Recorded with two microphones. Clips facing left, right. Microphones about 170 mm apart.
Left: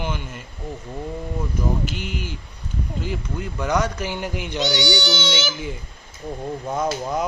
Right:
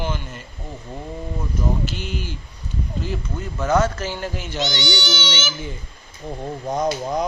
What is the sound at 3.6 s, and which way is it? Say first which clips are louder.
Speech: right 3 dB; 15° left (ahead or behind).